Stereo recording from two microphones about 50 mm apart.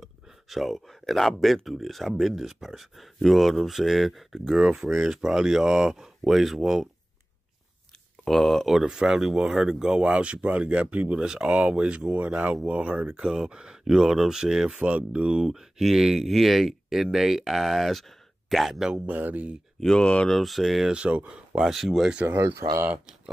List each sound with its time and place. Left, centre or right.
0.0 s speech: centre
8.3 s speech: centre
8.6 s speech: centre; by 13.2 s right
13.2 s speech: centre
14.8 s speech: right
15.3 s speech: centre
19.0 s speech: right
19.9 s speech: left
20.2 s speech: centre
20.9 s speech: right
21.3 s speech: centre
22.4 s speech: right